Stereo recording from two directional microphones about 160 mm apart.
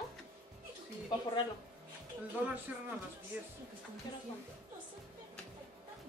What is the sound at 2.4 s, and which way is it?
Speech, 10° right (ahead or behind).